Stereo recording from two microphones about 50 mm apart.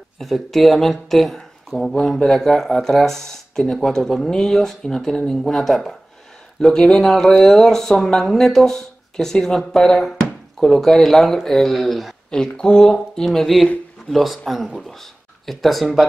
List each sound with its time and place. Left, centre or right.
0.2 s speech: centre
12.3 s speech: centre
12.8 s speech: centre